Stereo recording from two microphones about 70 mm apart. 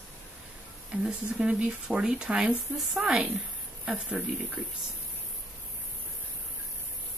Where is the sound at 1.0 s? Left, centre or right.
Centre.